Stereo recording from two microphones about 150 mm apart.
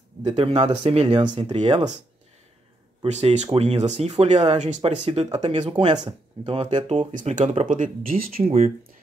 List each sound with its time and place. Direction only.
0.2 s speech: 45° right (ahead or behind)
1.4 s speech: 45° right (ahead or behind)
3.0 s speech: 45° right (ahead or behind)
5.6 s speech: 35° right (ahead or behind)
6.9 s speech: 50° right (ahead or behind); by 8.5 s 70° right (ahead or behind)
8.5 s speech: 45° right (ahead or behind)